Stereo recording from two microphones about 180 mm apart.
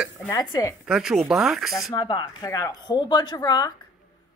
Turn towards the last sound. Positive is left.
turn(degrees=20)  # may be behind; listen again after turning